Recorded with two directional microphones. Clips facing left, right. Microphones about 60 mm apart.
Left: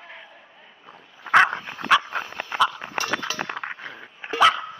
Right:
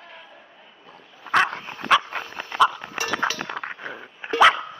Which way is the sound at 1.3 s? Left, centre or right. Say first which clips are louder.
Left 4 dB; centre.